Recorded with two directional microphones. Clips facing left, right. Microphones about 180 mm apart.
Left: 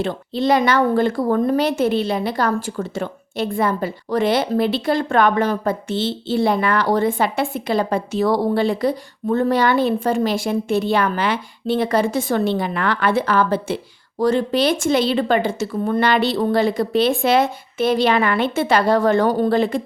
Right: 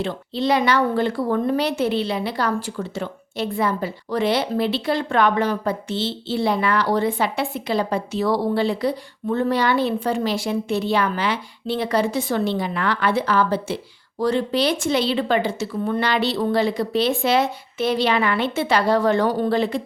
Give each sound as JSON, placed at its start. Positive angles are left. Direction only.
{"t": 0.0, "sound": "a woman's voice", "side_deg": 50}